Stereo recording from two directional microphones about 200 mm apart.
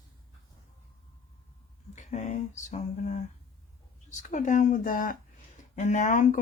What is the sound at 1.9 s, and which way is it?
Speech, 35° left (ahead or behind).